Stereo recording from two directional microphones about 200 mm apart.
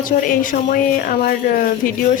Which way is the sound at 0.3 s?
45° left (ahead or behind).